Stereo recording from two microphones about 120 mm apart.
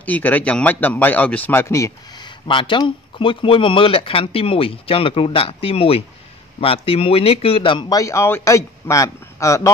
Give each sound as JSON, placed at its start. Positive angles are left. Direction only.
{"t": 0.0, "sound": "a man's voice", "side_deg": 15}
{"t": 2.4, "sound": "speech", "side_deg": 45}
{"t": 7.9, "sound": "a man's voice", "side_deg": 25}